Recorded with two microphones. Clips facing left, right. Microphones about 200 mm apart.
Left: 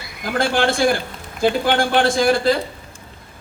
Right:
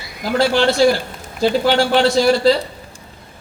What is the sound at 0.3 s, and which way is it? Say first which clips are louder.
A man's voice: right 4 dB; 50° left (ahead or behind).